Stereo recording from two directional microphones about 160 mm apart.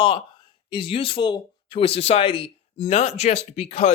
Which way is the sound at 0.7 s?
35° left (ahead or behind).